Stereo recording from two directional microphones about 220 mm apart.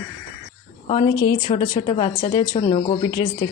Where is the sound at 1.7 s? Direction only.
30° left (ahead or behind).